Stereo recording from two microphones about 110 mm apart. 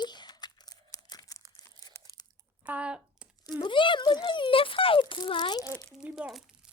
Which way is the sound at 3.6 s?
50° left (ahead or behind).